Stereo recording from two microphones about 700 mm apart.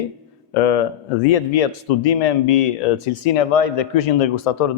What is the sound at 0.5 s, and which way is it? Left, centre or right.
Speech, left.